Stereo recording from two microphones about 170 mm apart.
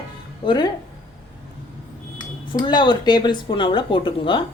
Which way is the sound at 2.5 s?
25° left (ahead or behind).